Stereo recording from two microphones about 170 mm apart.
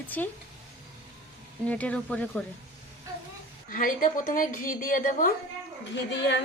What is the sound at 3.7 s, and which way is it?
Speech, 50° left (ahead or behind).